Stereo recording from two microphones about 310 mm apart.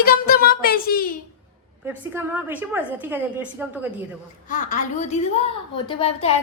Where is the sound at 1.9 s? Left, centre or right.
Centre.